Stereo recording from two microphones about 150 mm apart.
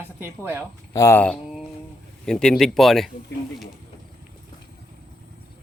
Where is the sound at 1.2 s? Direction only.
Centre (ahead or behind).